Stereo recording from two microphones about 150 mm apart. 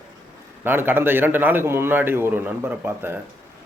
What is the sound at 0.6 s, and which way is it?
Speech, 15° right (ahead or behind).